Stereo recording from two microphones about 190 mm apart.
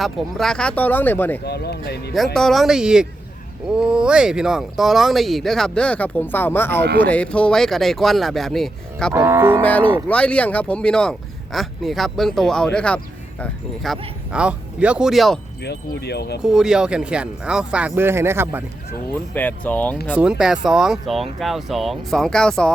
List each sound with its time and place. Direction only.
0.0 s speech: centre (ahead or behind)
1.5 s speech: 60° left (ahead or behind)
2.1 s speech: centre (ahead or behind)
9.1 s speech: 15° right (ahead or behind)
9.6 s speech: 10° left (ahead or behind)
15.6 s speech: 60° left (ahead or behind)
16.4 s speech: 5° right (ahead or behind)
19.3 s speech: 10° left (ahead or behind)
20.1 s speech: 5° right (ahead or behind)